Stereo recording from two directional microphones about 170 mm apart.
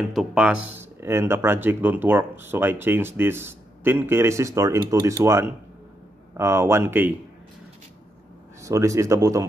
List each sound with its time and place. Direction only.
0.1 s speech: centre (ahead or behind)
8.6 s speech: 20° right (ahead or behind)